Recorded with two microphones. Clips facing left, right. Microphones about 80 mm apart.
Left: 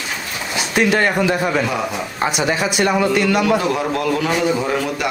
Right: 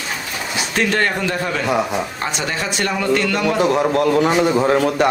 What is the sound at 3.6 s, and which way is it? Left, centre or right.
Speech, right.